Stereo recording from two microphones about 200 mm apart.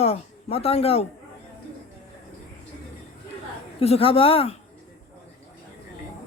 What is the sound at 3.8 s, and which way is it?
Speech, 30° left (ahead or behind).